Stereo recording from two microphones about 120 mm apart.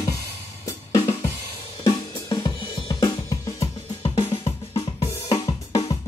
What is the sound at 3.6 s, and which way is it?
Drum kit, 55° left (ahead or behind).